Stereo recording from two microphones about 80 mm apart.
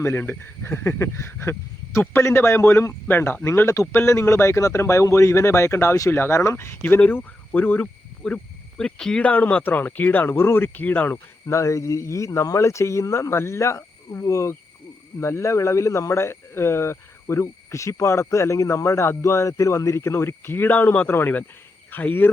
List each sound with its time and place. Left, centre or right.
0.0 s speech: left
6.8 s speech: left